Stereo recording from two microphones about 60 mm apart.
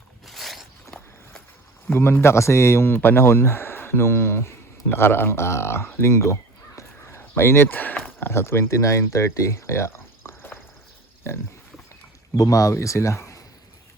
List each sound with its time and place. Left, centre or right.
0.3 s a sound: centre
1.9 s speech: left
6.0 s caw: left
8.2 s speech: left
12.4 s speech: left
12.7 s speech: left